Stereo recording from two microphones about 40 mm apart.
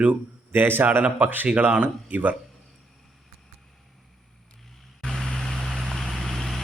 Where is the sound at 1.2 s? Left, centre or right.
Right.